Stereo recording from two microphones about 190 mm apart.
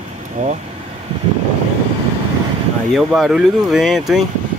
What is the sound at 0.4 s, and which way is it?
Speech, 35° right (ahead or behind).